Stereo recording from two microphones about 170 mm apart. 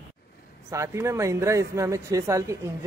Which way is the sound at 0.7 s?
15° right (ahead or behind).